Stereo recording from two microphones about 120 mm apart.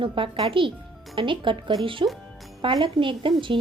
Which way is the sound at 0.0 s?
45° right (ahead or behind).